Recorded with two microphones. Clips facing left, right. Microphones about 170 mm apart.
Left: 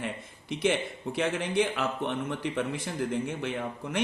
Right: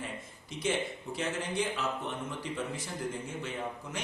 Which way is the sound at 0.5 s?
65° left (ahead or behind).